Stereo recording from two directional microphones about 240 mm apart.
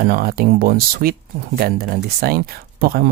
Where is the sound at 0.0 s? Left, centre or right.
Right.